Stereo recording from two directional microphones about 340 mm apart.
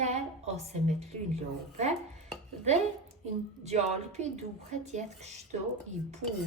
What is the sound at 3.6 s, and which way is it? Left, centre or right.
A woman's voice, centre.